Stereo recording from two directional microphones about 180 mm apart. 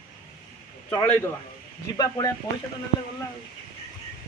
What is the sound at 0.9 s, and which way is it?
Speech, 10° left (ahead or behind).